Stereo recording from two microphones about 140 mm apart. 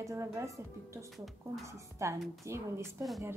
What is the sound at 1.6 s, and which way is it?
A woman's voice, 20° right (ahead or behind).